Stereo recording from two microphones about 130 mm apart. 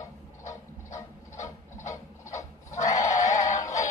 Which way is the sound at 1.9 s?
25° left (ahead or behind).